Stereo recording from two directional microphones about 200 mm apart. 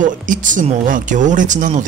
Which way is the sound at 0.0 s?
40° right (ahead or behind).